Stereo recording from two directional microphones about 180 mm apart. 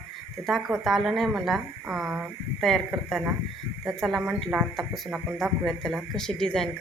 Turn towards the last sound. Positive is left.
turn(degrees=5)  # may be behind; listen again after turning